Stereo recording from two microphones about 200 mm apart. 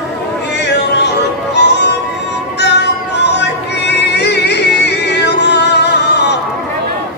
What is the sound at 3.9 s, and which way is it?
Music, 55° left (ahead or behind).